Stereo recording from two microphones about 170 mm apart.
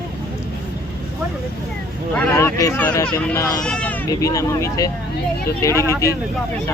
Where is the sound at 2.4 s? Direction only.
20° left (ahead or behind).